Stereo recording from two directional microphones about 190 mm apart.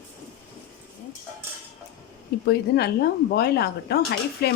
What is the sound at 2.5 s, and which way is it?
Speech, 60° left (ahead or behind).